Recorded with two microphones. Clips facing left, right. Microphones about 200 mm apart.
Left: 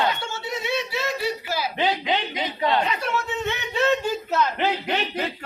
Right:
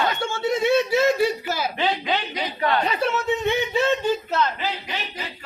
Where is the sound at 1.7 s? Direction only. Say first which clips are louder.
Left 3 dB; 20° left (ahead or behind).